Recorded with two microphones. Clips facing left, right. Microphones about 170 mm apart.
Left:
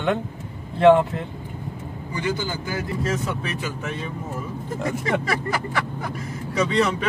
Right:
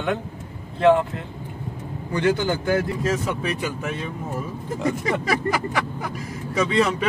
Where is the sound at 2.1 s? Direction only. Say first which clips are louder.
Right 6 dB; 60° right (ahead or behind).